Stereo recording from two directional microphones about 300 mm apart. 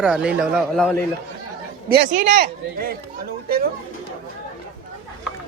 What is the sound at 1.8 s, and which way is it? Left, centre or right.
A man's voice, right.